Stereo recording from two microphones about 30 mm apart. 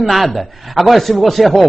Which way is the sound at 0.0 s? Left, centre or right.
Centre.